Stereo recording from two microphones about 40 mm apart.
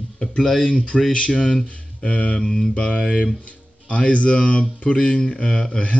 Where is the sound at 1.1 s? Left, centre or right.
Left.